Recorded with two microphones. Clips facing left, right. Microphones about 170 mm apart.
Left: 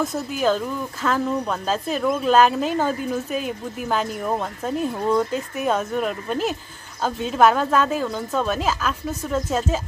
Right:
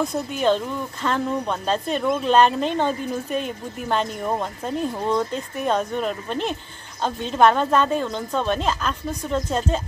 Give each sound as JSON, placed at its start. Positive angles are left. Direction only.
{"t": 0.0, "sound": "a woman's voice", "side_deg": 5}